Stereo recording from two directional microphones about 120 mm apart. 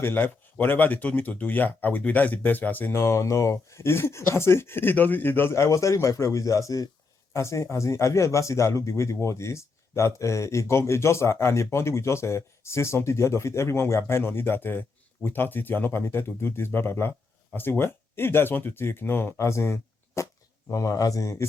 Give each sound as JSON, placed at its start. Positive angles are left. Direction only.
{"t": 0.0, "sound": "speech", "side_deg": 15}